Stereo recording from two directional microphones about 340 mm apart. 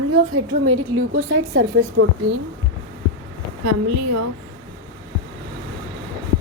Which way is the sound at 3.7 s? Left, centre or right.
Right.